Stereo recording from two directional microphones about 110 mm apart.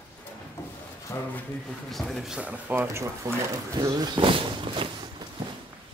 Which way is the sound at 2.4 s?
15° right (ahead or behind).